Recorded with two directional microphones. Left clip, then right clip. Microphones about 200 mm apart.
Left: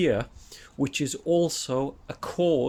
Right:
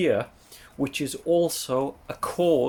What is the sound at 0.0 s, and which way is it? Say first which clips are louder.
Speech: right 1 dB; 25° left (ahead or behind).